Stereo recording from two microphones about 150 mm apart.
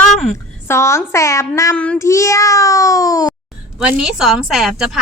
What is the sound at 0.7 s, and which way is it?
A child's voice, 20° left (ahead or behind).